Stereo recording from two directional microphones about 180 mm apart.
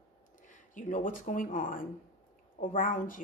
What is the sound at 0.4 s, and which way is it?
Speech, 45° left (ahead or behind).